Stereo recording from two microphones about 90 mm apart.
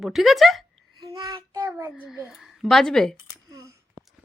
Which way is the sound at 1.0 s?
45° right (ahead or behind).